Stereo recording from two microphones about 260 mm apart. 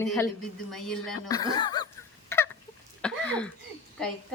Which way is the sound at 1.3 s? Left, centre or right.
Centre.